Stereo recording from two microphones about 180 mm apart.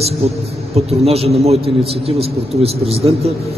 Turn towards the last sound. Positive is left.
turn(degrees=-35)  # may be behind; listen again after turning